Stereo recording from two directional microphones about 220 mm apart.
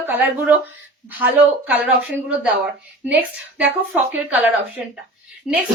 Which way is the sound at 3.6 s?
10° right (ahead or behind).